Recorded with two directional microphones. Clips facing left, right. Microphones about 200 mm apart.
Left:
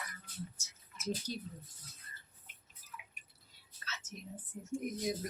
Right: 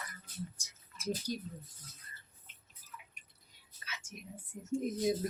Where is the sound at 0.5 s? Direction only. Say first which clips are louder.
Left 1 dB; 10° right (ahead or behind).